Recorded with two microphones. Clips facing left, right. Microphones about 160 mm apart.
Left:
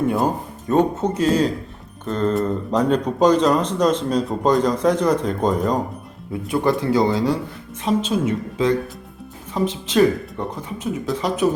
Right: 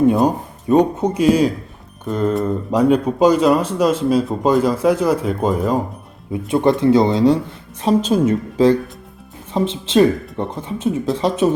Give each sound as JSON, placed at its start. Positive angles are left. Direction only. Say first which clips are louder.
{"t": 0.3, "sound": "speech", "louder": "right 5 dB", "side_deg": -15}
{"t": 6.3, "sound": "speech", "louder": "right 4 dB", "side_deg": -20}
{"t": 7.8, "sound": "a woman's voice", "louder": "right 5 dB", "side_deg": -35}
{"t": 9.5, "sound": "speech", "louder": "right 4 dB", "side_deg": -25}